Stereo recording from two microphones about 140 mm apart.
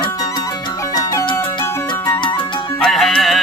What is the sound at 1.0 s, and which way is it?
Music, 25° left (ahead or behind).